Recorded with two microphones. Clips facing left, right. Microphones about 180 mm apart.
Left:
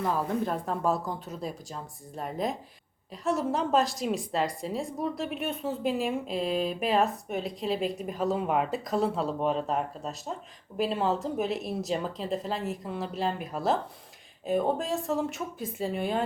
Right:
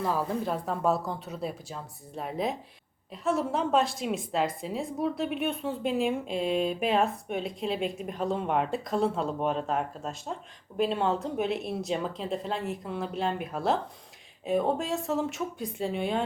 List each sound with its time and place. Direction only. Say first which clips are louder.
0.0 s a woman's voice: left 1 dB; centre (ahead or behind)